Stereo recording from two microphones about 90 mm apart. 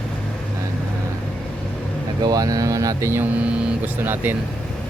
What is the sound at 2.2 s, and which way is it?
Speech, 45° right (ahead or behind).